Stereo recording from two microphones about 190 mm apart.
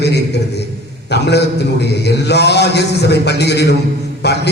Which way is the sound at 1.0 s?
60° left (ahead or behind).